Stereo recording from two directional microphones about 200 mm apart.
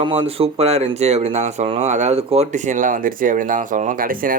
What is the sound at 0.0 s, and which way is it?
Speech, 30° right (ahead or behind).